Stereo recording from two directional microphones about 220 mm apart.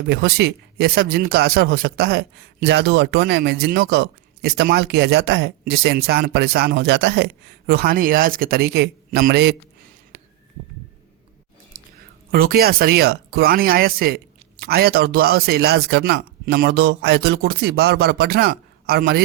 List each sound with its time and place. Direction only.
0.1 s speech: 50° right (ahead or behind)
11.7 s a sound: 40° right (ahead or behind)
12.3 s speech: 40° right (ahead or behind)